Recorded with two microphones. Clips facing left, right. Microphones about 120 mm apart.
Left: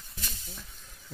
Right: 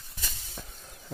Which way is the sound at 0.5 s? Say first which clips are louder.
Right 5 dB; 40° right (ahead or behind).